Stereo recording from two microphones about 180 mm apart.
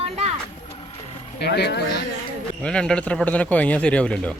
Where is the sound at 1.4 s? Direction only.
65° left (ahead or behind).